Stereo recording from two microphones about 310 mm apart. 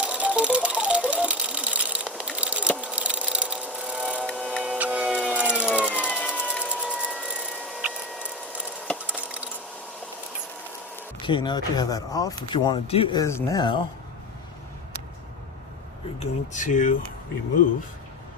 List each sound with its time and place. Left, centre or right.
0.0 s sewing machine: centre
10.9 s speech: centre
16.2 s speech: left